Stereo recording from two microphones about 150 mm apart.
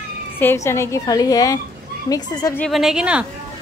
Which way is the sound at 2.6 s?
Centre (ahead or behind).